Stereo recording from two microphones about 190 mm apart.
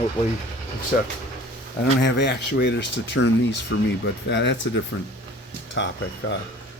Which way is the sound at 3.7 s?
90° left.